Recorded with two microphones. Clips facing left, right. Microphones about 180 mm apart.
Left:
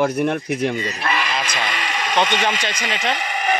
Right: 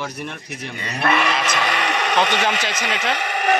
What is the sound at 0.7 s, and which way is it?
Speech, 60° right (ahead or behind).